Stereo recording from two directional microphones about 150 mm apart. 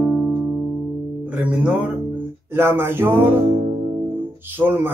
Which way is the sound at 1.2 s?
10° right (ahead or behind).